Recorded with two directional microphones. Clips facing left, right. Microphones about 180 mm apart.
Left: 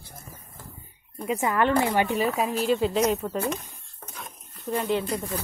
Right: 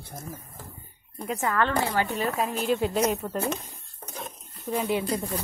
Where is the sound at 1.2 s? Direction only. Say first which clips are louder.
Left 3 dB; 10° left (ahead or behind).